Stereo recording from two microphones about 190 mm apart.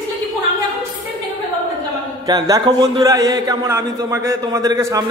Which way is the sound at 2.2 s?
20° right (ahead or behind).